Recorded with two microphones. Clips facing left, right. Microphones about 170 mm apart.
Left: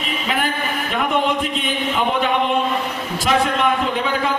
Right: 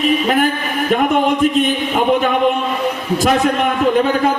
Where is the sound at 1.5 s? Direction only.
50° right (ahead or behind).